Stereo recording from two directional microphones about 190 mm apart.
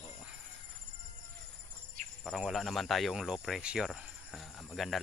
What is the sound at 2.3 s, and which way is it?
Speech, centre (ahead or behind).